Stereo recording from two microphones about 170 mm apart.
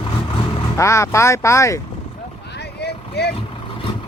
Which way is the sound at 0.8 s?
15° left (ahead or behind).